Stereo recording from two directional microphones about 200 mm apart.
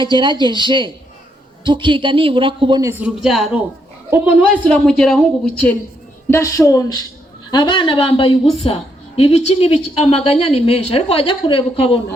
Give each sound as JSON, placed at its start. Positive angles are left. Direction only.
{"t": 0.0, "sound": "speech", "side_deg": -25}
{"t": 3.0, "sound": "a woman's voice", "side_deg": 0}
{"t": 4.6, "sound": "a woman's voice", "side_deg": 5}
{"t": 6.3, "sound": "a woman's voice", "side_deg": 15}